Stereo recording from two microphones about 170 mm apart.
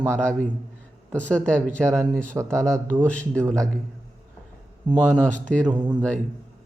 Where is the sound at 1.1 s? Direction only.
5° left (ahead or behind).